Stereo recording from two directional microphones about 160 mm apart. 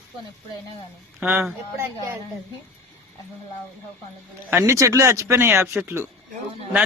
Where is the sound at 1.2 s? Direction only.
10° right (ahead or behind).